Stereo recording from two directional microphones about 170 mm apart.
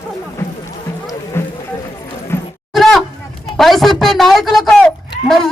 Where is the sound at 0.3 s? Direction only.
20° left (ahead or behind).